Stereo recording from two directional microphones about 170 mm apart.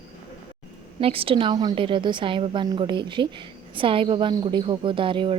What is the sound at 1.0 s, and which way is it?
A woman's voice, 35° right (ahead or behind).